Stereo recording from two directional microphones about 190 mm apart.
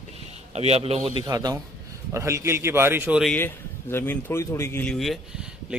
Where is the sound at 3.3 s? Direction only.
10° left (ahead or behind).